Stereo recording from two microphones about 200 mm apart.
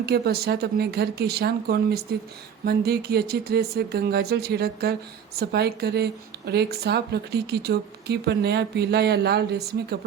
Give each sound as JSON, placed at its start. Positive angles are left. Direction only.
{"t": 0.0, "sound": "a woman's voice", "side_deg": -55}